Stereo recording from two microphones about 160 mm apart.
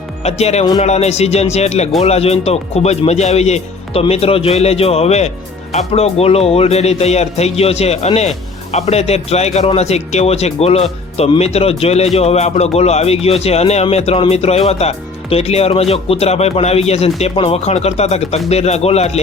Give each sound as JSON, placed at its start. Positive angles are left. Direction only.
{"t": 0.2, "sound": "speech", "side_deg": 40}